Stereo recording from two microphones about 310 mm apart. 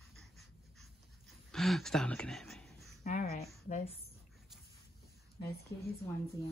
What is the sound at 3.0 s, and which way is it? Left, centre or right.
Speech, left.